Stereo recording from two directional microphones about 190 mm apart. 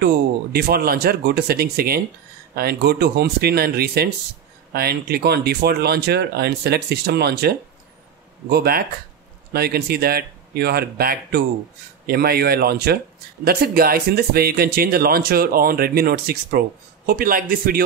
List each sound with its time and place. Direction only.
0.0 s speech: 55° right (ahead or behind)